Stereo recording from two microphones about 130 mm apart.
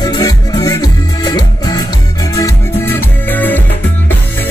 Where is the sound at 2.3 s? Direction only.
20° left (ahead or behind).